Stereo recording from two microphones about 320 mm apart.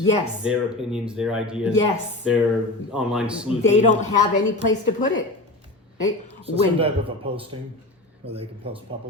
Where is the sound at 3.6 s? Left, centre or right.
Left.